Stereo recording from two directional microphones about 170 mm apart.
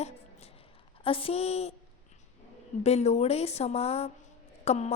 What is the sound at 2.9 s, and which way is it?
A woman's voice, 40° left (ahead or behind).